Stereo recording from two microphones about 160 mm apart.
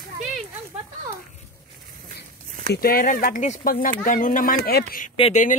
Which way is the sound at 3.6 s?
65° left (ahead or behind).